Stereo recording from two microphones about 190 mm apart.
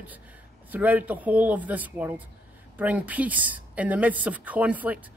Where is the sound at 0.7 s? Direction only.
10° right (ahead or behind).